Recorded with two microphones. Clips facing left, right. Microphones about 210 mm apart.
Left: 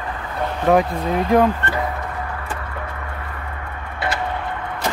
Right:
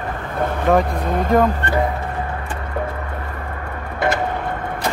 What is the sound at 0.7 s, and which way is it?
Speech, centre (ahead or behind).